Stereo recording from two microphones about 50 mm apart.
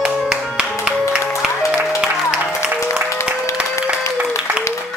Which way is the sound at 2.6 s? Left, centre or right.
Left.